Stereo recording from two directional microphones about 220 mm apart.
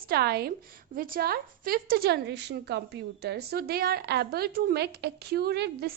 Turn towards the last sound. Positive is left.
turn(degrees=-45)  # may be behind; listen again after turning